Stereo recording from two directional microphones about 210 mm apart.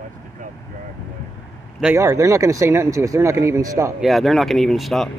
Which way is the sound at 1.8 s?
15° right (ahead or behind).